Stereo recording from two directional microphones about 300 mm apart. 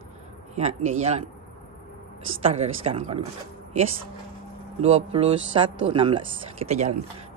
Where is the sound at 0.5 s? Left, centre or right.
Right.